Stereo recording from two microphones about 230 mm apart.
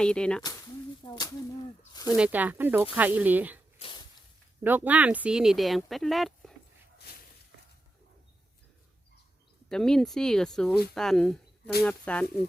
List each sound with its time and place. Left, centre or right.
0.0 s speech: centre
1.0 s a sound: centre
1.9 s snake: centre
2.1 s speech: centre
3.8 s a sound: left
4.6 s speech: centre
9.6 s speech: centre